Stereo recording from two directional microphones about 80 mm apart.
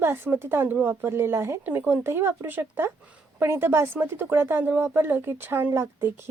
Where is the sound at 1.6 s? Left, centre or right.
Right.